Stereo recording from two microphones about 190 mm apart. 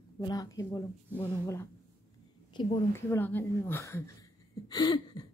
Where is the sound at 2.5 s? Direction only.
25° left (ahead or behind).